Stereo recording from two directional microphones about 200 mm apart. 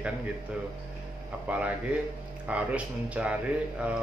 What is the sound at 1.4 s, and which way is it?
A man's voice, 5° right (ahead or behind).